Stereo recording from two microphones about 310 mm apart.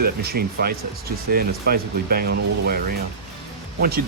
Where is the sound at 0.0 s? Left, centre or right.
Right.